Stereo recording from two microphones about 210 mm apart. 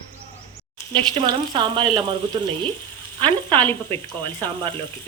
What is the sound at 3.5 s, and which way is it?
Speech, 10° left (ahead or behind).